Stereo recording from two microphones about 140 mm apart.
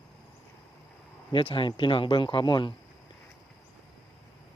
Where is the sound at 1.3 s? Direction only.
35° left (ahead or behind).